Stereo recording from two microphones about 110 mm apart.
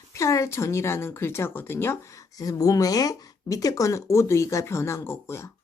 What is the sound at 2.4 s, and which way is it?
A woman's voice, 30° left (ahead or behind).